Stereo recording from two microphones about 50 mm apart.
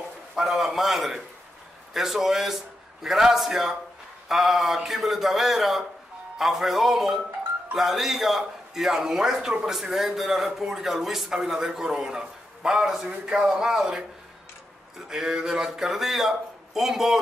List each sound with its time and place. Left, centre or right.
0.4 s a man's voice: centre